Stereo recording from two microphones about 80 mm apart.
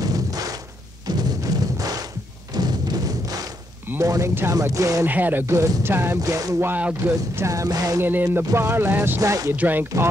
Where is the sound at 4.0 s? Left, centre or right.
Right.